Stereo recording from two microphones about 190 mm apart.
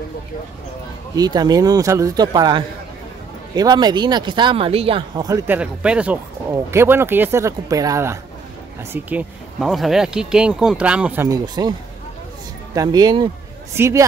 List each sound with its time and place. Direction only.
1.1 s speech: 20° right (ahead or behind)
5.6 s speech: 5° right (ahead or behind)
8.9 s speech: 5° right (ahead or behind)
11.2 s speech: 20° right (ahead or behind)
12.7 s speech: 20° right (ahead or behind)